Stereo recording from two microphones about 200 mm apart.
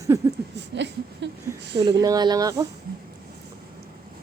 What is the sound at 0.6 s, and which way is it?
Speech, 60° right (ahead or behind).